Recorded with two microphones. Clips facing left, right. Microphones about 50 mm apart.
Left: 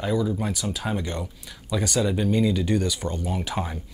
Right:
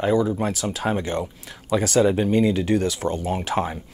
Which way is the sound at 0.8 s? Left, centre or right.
Right.